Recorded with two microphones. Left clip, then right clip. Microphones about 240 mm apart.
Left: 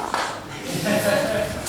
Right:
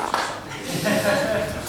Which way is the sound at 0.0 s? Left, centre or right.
Centre.